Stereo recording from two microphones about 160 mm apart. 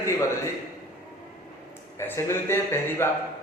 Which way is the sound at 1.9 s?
15° left (ahead or behind).